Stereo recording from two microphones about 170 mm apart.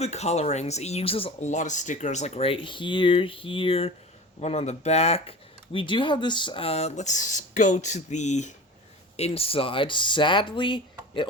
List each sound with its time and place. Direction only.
0.0 s speech: 40° left (ahead or behind)